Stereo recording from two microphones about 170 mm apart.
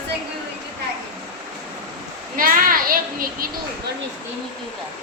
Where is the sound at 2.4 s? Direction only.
55° right (ahead or behind).